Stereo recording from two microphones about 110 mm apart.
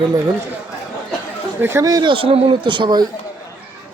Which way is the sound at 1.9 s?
40° right (ahead or behind).